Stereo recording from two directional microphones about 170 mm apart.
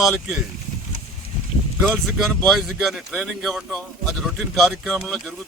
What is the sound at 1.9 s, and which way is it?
Speech, centre (ahead or behind).